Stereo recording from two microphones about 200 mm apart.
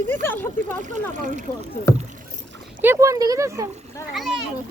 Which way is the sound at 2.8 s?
15° right (ahead or behind).